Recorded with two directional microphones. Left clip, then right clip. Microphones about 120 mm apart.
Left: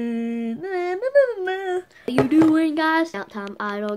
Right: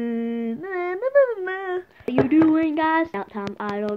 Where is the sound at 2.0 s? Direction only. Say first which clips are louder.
Left 1 dB; 25° left (ahead or behind).